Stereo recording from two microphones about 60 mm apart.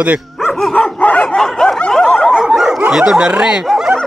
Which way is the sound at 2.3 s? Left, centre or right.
Centre.